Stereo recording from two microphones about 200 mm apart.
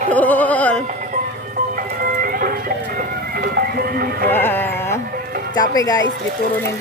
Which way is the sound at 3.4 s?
50° right (ahead or behind).